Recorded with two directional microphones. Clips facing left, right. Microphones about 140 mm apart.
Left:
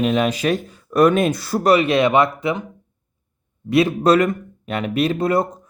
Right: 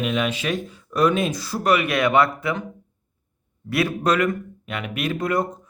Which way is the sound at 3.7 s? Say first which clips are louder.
Left 6 dB; 25° left (ahead or behind).